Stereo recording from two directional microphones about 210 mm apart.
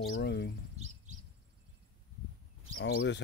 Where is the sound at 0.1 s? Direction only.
50° left (ahead or behind).